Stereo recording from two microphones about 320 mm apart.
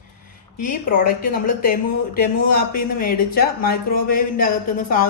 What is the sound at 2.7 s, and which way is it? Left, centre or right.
Speech, left.